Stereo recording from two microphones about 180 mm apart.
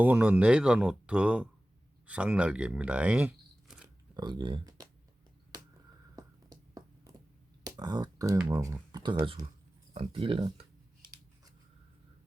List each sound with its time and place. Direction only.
0.0 s speech: 10° right (ahead or behind)
4.1 s speech: 25° right (ahead or behind)
5.5 s a sound: 20° right (ahead or behind)
7.6 s speech: 20° right (ahead or behind)
9.9 s scissors: 30° right (ahead or behind)